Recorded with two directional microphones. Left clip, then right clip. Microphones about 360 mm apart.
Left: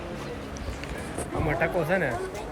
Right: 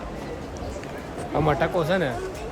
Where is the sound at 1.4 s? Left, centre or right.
Centre.